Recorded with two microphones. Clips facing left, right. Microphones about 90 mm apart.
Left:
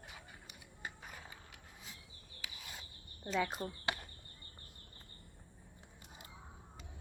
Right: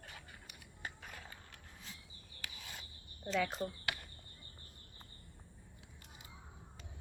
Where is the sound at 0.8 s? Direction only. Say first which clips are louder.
Even; 10° left (ahead or behind).